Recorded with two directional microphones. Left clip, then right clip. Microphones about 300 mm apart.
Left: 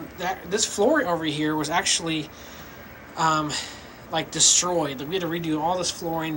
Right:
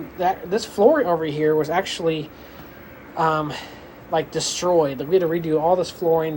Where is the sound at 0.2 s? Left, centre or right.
Centre.